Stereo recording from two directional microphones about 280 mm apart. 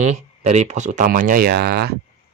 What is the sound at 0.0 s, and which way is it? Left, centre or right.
Speech, right.